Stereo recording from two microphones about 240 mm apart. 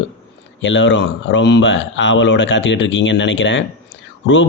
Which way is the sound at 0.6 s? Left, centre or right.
Left.